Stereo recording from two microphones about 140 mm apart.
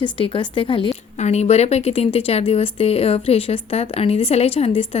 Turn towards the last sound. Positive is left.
turn(degrees=45)  # may be behind; listen again after turning